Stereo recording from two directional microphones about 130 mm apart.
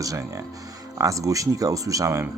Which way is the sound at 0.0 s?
25° right (ahead or behind).